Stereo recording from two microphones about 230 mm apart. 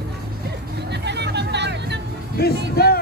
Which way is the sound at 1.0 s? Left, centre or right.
Right.